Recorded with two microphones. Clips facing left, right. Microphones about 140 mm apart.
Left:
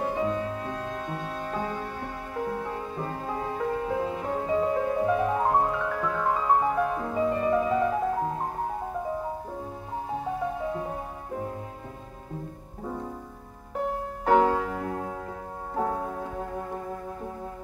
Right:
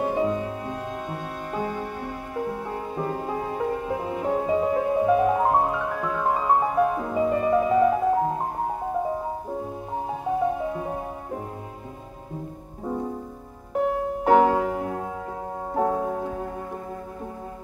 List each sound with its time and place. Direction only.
0.0 s music: 20° right (ahead or behind)
14.2 s music: 20° right (ahead or behind)